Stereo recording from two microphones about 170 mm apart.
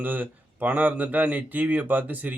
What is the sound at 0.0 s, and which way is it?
Speech, 10° right (ahead or behind).